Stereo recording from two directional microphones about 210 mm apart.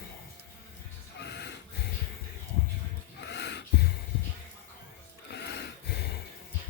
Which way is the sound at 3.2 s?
55° left (ahead or behind).